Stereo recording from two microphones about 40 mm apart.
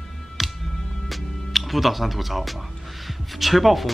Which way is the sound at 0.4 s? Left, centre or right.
Centre.